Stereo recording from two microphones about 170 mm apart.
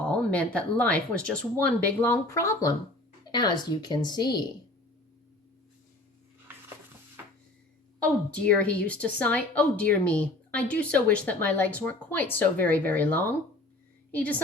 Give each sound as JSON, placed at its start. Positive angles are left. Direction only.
{"t": 0.0, "sound": "a woman's voice", "side_deg": 5}
{"t": 7.9, "sound": "a woman's voice", "side_deg": 5}